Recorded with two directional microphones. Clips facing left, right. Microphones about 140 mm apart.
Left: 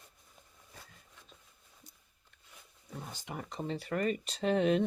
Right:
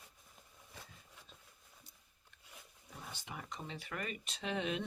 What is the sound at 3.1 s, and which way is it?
Speech, 40° left (ahead or behind).